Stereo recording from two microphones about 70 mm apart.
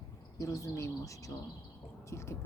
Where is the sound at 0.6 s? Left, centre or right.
Left.